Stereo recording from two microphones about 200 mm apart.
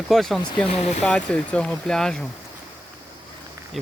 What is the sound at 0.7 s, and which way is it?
Speech, 35° left (ahead or behind).